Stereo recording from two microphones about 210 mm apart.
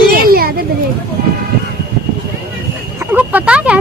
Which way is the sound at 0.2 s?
45° right (ahead or behind).